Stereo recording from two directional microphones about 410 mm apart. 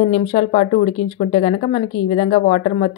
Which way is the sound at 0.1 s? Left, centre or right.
Centre.